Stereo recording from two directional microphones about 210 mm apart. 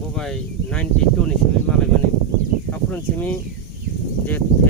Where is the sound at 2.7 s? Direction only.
10° left (ahead or behind).